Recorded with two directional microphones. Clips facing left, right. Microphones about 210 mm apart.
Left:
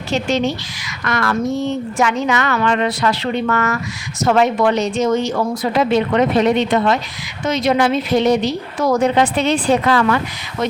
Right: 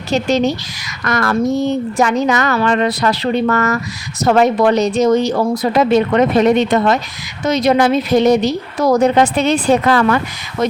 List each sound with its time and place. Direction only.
0.1 s a woman's voice: 40° right (ahead or behind)